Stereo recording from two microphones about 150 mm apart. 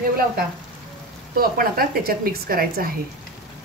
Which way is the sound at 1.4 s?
80° right.